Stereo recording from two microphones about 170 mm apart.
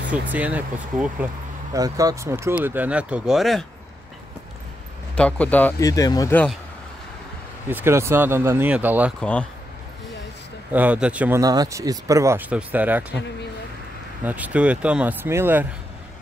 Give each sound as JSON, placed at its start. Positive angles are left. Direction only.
{"t": 0.1, "sound": "speech", "side_deg": -10}
{"t": 1.7, "sound": "speech", "side_deg": -20}
{"t": 5.1, "sound": "speech", "side_deg": 5}
{"t": 5.8, "sound": "speech", "side_deg": 20}
{"t": 7.7, "sound": "speech", "side_deg": -15}
{"t": 9.2, "sound": "speech", "side_deg": 5}
{"t": 10.7, "sound": "speech", "side_deg": -10}
{"t": 14.2, "sound": "speech", "side_deg": -10}